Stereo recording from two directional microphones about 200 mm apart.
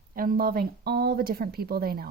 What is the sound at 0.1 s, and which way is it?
A woman's voice, 45° right (ahead or behind).